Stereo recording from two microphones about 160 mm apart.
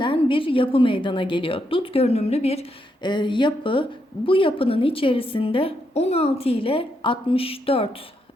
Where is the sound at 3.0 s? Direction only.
30° left (ahead or behind).